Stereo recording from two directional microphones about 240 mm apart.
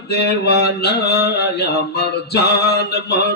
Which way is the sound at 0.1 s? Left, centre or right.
Left.